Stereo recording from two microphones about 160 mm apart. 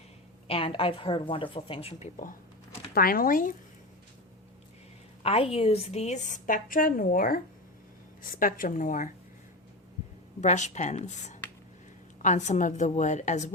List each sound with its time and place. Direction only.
0.4 s a woman's voice: 35° left (ahead or behind)
2.9 s a woman's voice: 65° left (ahead or behind)
5.2 s a woman's voice: 40° left (ahead or behind); by 9.0 s 55° left (ahead or behind)
10.4 s a woman's voice: 45° left (ahead or behind)